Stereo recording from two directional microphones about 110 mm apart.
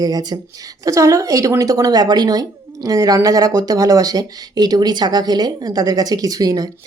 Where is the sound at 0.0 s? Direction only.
35° right (ahead or behind).